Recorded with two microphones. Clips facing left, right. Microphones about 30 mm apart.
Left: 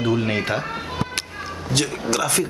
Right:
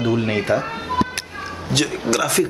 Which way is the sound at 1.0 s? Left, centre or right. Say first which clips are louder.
Right 10 dB; right.